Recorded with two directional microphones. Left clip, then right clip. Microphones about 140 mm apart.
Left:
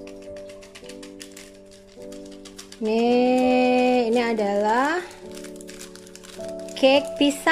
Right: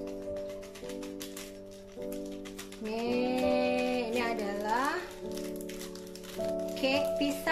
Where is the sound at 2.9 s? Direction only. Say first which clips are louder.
Left 12 dB; 70° left (ahead or behind).